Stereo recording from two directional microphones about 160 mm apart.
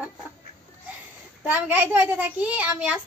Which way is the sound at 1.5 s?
10° right (ahead or behind).